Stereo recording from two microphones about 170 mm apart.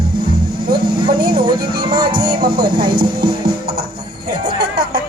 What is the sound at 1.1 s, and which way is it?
Speech, 65° right (ahead or behind).